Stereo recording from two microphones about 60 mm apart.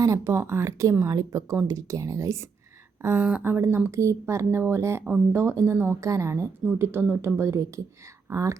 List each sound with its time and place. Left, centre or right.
0.0 s speech: right
0.3 s speech: right
1.1 s speech: right
3.4 s speech: right
6.0 s speech: right
6.7 s speech: right
8.3 s speech: right